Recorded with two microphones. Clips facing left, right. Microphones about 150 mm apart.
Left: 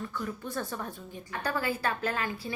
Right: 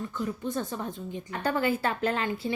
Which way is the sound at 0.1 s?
20° right (ahead or behind).